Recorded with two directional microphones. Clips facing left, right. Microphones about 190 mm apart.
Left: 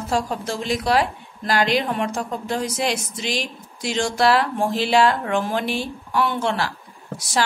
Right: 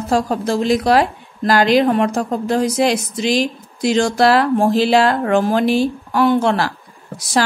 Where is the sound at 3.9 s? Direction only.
40° right (ahead or behind).